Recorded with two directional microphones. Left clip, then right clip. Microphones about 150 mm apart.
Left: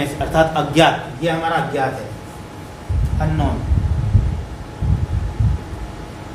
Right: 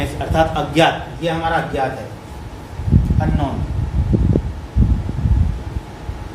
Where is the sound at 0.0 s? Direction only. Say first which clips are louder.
Left 1 dB; 15° left (ahead or behind).